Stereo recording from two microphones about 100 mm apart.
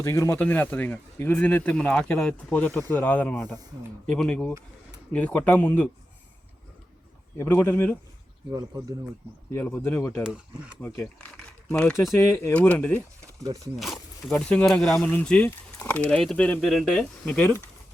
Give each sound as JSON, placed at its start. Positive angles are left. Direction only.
{"t": 0.0, "sound": "speech", "side_deg": 25}
{"t": 7.3, "sound": "speech", "side_deg": 25}
{"t": 8.5, "sound": "speech", "side_deg": -40}
{"t": 9.6, "sound": "speech", "side_deg": 20}
{"t": 10.2, "sound": "speech", "side_deg": -10}
{"t": 10.8, "sound": "speech", "side_deg": 20}
{"t": 12.1, "sound": "speech", "side_deg": 25}
{"t": 12.5, "sound": "speech", "side_deg": 15}
{"t": 13.7, "sound": "a sound", "side_deg": 0}
{"t": 14.3, "sound": "speech", "side_deg": 10}